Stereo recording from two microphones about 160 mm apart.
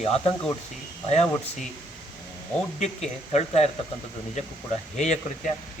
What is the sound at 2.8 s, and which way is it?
Speech, 45° left (ahead or behind).